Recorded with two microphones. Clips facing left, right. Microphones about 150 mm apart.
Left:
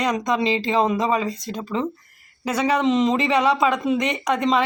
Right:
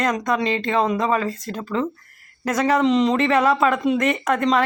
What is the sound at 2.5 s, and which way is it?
Speech, 10° left (ahead or behind).